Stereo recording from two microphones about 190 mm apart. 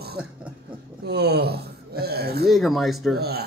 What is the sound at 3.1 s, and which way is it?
Speech, 55° right (ahead or behind).